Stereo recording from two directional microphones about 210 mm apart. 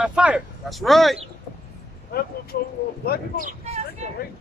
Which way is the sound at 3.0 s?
45° left (ahead or behind).